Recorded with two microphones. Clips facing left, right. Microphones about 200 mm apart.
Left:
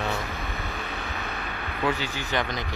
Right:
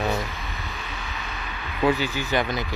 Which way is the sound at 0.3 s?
50° left (ahead or behind).